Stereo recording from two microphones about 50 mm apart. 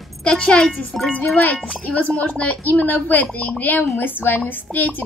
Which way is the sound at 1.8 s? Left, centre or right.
Left.